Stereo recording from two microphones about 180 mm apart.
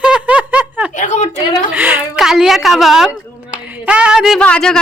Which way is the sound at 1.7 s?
10° right (ahead or behind).